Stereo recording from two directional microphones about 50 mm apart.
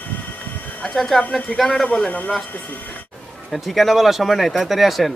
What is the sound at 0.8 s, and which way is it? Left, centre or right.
A man's voice, centre.